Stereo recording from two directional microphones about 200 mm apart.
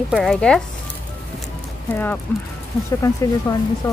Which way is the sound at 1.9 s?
10° left (ahead or behind).